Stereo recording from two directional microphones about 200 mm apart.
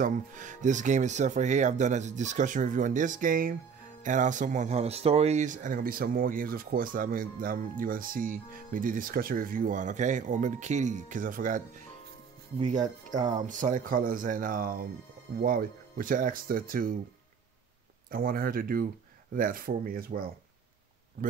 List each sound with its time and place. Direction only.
0.0 s speech: 40° right (ahead or behind)
18.1 s speech: 45° right (ahead or behind)